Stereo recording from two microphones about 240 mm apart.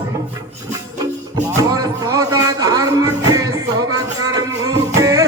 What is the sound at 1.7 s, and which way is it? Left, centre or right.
Speech, centre.